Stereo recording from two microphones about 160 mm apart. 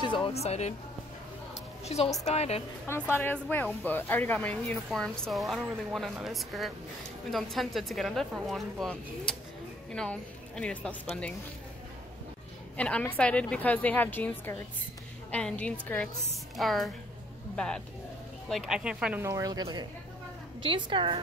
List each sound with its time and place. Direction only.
0.0 s speech: 30° left (ahead or behind)
1.9 s a woman's voice: 40° left (ahead or behind)
2.9 s a woman's voice: 10° left (ahead or behind)
12.7 s a woman's voice: 10° left (ahead or behind)
19.2 s a woman's voice: 20° right (ahead or behind)